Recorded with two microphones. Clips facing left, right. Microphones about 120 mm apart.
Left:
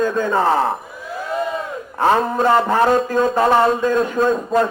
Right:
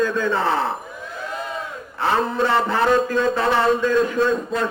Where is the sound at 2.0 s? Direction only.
45° left (ahead or behind).